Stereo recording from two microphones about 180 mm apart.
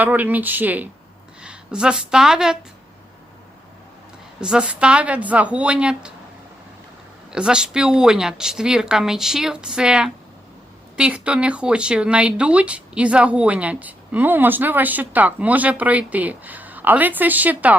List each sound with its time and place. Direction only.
0.0 s speech: 10° right (ahead or behind)
4.4 s speech: 5° right (ahead or behind)
7.3 s speech: 5° right (ahead or behind)